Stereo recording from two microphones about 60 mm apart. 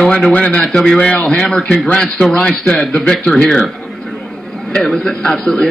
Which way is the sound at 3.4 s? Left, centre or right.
Centre.